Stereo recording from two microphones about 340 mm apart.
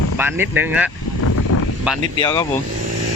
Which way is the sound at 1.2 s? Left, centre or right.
Left.